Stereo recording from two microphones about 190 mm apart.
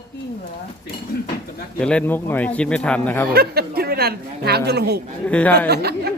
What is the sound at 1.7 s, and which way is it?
Speech, 5° left (ahead or behind).